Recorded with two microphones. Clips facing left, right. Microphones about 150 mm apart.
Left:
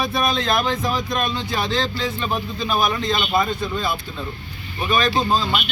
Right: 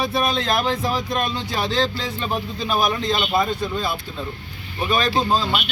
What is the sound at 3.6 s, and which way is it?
Speech, 30° right (ahead or behind).